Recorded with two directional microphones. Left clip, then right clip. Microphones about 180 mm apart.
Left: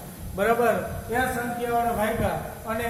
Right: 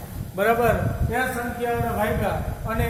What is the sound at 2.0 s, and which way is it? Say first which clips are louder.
Speech: right 1 dB; 15° right (ahead or behind).